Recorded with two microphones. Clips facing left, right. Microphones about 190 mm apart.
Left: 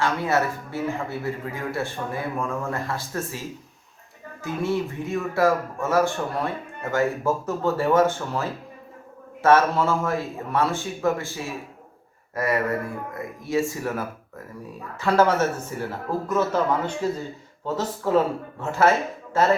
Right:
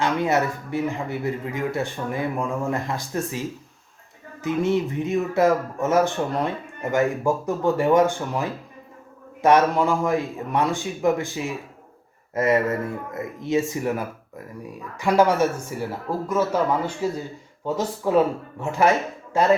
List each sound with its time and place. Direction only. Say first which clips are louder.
0.0 s speech: right 2 dB; 20° right (ahead or behind)
4.4 s speech: right 4 dB; 20° right (ahead or behind)